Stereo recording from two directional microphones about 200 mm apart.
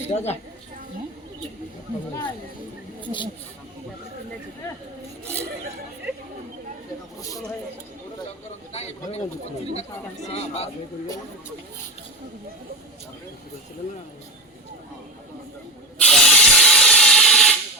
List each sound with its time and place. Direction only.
0.1 s speech: 35° left (ahead or behind)
3.0 s speech: 25° left (ahead or behind)
8.7 s speech: 30° left (ahead or behind)
10.3 s speech: 30° left (ahead or behind)
16.0 s steam: 5° left (ahead or behind)